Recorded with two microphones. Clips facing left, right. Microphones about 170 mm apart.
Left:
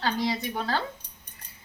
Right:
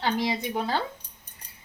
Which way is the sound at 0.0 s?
20° right (ahead or behind).